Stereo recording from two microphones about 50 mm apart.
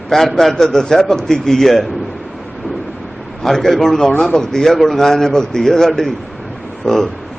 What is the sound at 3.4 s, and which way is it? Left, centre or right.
A man's voice, centre.